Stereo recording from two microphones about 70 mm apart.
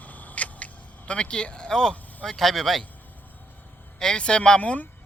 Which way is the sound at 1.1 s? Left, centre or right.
Centre.